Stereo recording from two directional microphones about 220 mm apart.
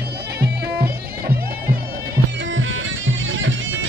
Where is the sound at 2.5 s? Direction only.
60° right (ahead or behind).